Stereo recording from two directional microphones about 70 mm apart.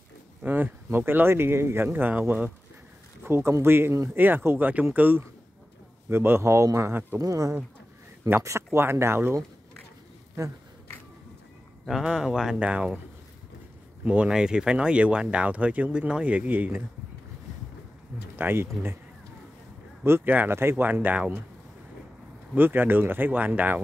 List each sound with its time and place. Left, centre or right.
0.4 s speech: right
3.3 s speech: right
7.2 s speech: right
11.8 s speech: centre
14.0 s speech: centre
18.3 s speech: right
20.0 s speech: right
22.6 s speech: right